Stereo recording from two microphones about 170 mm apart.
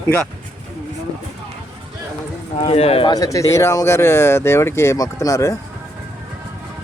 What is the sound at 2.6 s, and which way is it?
Speech, 35° left (ahead or behind).